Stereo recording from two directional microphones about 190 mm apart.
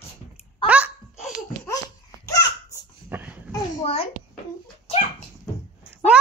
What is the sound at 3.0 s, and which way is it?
Dog, 10° right (ahead or behind).